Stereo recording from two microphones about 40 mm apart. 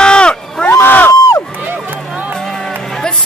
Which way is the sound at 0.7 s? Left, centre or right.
Left.